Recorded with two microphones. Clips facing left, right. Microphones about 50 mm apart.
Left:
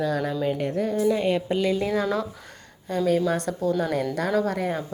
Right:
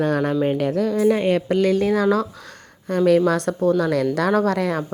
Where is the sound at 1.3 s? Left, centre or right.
Right.